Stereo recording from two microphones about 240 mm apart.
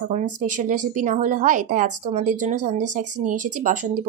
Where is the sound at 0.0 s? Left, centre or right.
Right.